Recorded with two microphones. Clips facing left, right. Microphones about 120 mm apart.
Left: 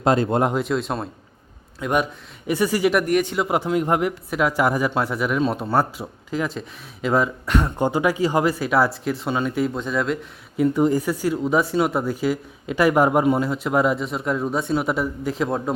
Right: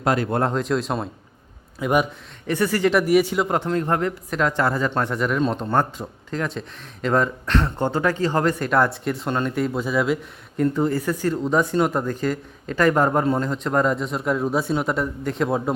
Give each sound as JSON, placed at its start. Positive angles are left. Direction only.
{"t": 0.0, "sound": "speech", "side_deg": 25}
{"t": 0.5, "sound": "speech", "side_deg": 0}
{"t": 2.5, "sound": "speech", "side_deg": 15}
{"t": 2.9, "sound": "speech", "side_deg": -5}
{"t": 10.6, "sound": "speech", "side_deg": 15}